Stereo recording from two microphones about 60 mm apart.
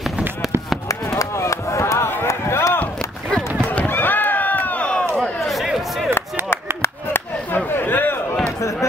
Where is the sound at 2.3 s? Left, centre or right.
Left.